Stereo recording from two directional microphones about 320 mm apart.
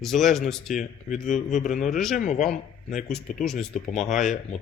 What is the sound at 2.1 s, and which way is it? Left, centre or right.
Speech, left.